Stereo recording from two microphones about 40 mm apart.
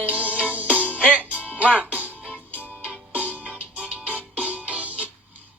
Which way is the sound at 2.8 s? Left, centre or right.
Right.